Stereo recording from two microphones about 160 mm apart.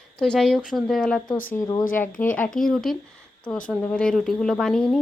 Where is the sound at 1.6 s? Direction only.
25° left (ahead or behind).